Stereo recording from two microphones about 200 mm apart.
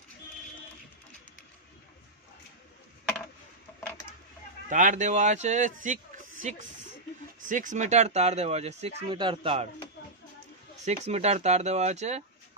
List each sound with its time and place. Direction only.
4.6 s speech: 40° right (ahead or behind)
7.3 s speech: 40° right (ahead or behind)
10.9 s speech: 35° right (ahead or behind)